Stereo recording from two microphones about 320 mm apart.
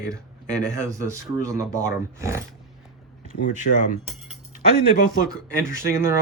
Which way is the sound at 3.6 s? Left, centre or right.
Left.